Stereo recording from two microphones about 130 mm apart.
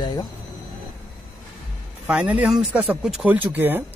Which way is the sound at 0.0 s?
30° left (ahead or behind).